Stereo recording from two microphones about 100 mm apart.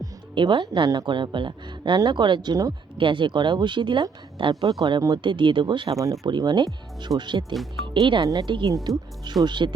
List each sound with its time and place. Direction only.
0.3 s speech: 50° right (ahead or behind)
3.0 s speech: 55° right (ahead or behind)
5.9 s speech: 35° right (ahead or behind)
6.2 s speech: 45° right (ahead or behind)